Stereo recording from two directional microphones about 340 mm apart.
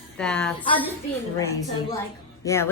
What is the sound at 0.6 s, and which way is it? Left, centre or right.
Speech, centre.